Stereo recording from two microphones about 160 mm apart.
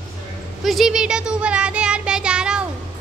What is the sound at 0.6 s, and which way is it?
Child singing, centre (ahead or behind).